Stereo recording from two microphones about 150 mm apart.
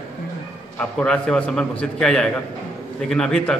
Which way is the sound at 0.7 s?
5° left (ahead or behind).